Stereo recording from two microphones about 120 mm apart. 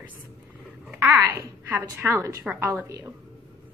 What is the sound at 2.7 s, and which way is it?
Speech, 25° right (ahead or behind).